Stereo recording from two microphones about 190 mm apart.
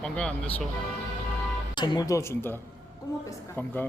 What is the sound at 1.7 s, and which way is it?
Speech, 25° left (ahead or behind).